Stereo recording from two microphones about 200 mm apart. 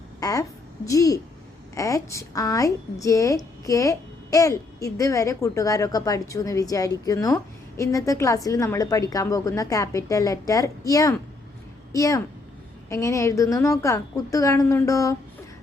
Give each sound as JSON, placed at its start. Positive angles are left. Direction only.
{"t": 0.2, "sound": "a woman's voice", "side_deg": 15}